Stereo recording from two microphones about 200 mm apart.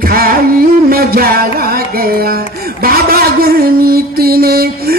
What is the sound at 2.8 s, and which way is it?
Mantra, 50° right (ahead or behind).